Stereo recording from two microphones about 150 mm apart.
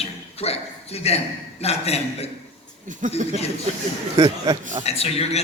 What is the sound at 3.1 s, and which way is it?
Speech, 45° left (ahead or behind).